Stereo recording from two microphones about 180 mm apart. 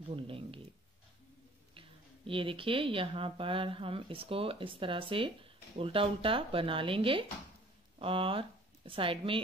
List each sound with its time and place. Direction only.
0.1 s speech: 30° right (ahead or behind)
1.8 s speech: 30° right (ahead or behind)